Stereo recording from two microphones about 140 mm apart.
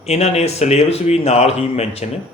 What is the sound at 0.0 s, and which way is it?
Speech, 50° left (ahead or behind).